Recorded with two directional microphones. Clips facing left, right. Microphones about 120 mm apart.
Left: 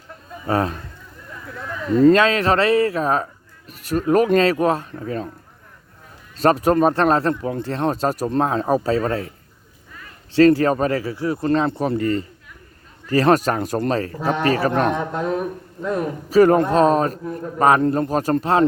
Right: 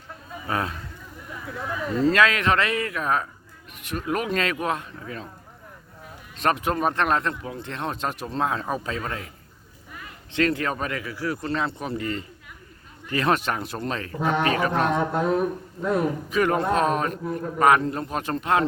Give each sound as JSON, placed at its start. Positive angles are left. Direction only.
{"t": 0.4, "sound": "speech", "side_deg": 35}
{"t": 1.3, "sound": "a sound", "side_deg": -10}
{"t": 2.1, "sound": "speech", "side_deg": 30}
{"t": 6.3, "sound": "speech", "side_deg": 35}
{"t": 10.3, "sound": "speech", "side_deg": 35}
{"t": 11.4, "sound": "speech", "side_deg": 45}
{"t": 15.1, "sound": "speech", "side_deg": -5}
{"t": 16.3, "sound": "speech", "side_deg": 35}